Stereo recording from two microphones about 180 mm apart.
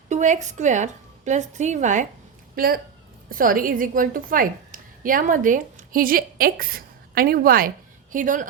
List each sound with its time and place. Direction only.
0.1 s a woman's voice: 40° right (ahead or behind)
2.6 s a woman's voice: 55° right (ahead or behind)